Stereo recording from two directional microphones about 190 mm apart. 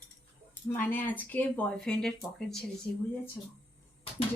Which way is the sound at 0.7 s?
10° left (ahead or behind).